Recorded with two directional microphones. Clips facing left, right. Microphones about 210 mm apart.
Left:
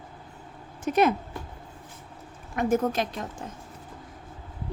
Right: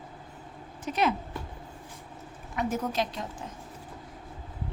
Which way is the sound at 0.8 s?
50° left (ahead or behind).